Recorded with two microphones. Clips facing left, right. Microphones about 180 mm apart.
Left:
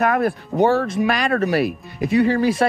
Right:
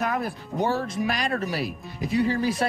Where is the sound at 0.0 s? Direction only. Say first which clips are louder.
Left 8 dB; 60° left (ahead or behind).